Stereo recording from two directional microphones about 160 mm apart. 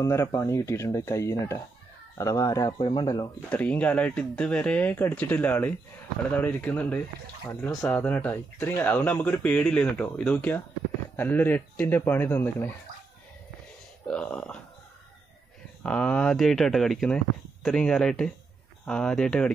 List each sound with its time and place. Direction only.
0.0 s speech: 20° left (ahead or behind)
3.4 s speech: 10° left (ahead or behind)
14.0 s speech: 10° left (ahead or behind)
15.8 s speech: 5° left (ahead or behind)